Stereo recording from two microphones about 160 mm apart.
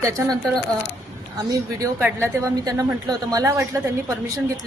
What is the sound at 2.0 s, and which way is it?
A woman's voice, 15° right (ahead or behind).